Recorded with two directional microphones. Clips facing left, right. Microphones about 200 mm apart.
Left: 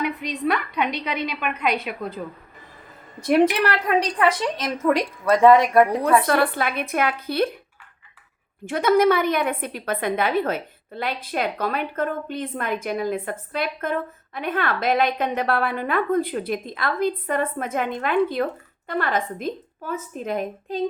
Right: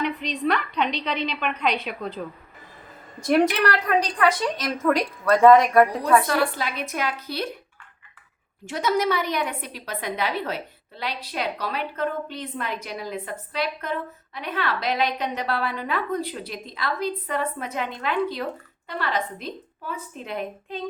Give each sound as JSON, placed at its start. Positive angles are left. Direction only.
{"t": 0.0, "sound": "a woman's voice", "side_deg": 10}
{"t": 3.2, "sound": "a woman's voice", "side_deg": 10}
{"t": 4.2, "sound": "a woman's voice", "side_deg": 25}
{"t": 6.2, "sound": "a woman's voice", "side_deg": 55}
{"t": 8.6, "sound": "a woman's voice", "side_deg": 55}